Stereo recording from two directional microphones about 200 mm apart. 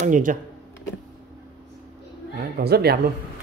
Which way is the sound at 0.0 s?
40° right (ahead or behind).